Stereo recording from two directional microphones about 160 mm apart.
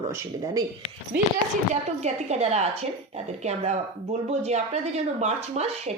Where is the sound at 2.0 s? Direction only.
45° right (ahead or behind).